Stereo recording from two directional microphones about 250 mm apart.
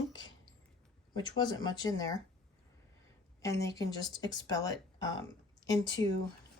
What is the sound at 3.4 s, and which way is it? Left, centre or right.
A woman's voice, centre.